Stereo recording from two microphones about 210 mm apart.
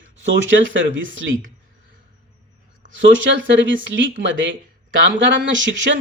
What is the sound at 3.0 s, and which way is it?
Speech, 65° right (ahead or behind).